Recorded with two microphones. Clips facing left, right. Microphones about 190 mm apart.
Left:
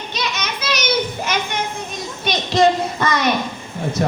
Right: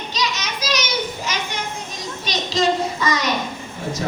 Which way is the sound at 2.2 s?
60° left (ahead or behind).